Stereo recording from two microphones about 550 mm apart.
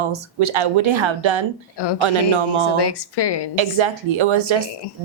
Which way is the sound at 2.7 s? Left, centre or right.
Left.